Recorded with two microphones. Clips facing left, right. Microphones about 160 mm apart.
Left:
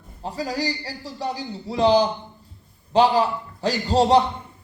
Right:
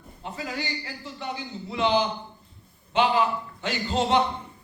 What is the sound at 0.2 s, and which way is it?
A man's voice, 35° left (ahead or behind).